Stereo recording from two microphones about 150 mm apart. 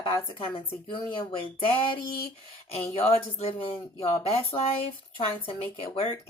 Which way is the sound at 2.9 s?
40° left (ahead or behind).